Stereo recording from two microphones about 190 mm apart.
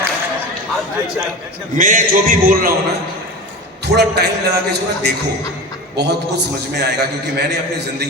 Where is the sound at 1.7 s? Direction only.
45° right (ahead or behind).